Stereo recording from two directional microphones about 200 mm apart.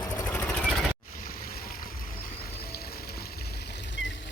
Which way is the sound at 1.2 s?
45° left (ahead or behind).